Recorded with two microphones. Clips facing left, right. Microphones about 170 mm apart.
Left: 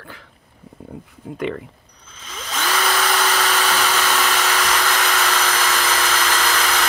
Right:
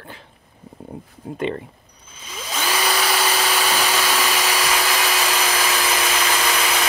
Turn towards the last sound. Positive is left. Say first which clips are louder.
# left 1 dB
turn(degrees=-10)  # may be behind; listen again after turning